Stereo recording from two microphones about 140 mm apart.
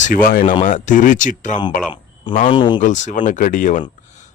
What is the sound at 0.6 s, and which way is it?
A man's voice, 65° left (ahead or behind).